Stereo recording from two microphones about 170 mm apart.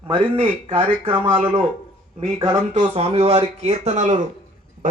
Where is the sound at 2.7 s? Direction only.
40° right (ahead or behind).